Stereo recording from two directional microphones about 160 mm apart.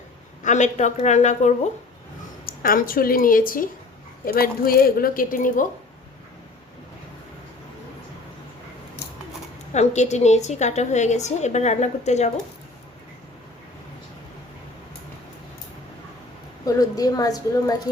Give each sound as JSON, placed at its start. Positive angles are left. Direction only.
{"t": 0.4, "sound": "a woman's voice", "side_deg": 50}
{"t": 2.5, "sound": "speech", "side_deg": 65}
{"t": 9.7, "sound": "a woman's voice", "side_deg": 45}
{"t": 16.6, "sound": "a woman's voice", "side_deg": 25}